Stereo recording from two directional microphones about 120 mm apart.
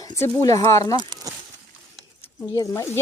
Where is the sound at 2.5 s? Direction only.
25° left (ahead or behind).